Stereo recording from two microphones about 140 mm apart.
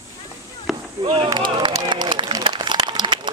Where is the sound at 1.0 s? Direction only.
30° right (ahead or behind).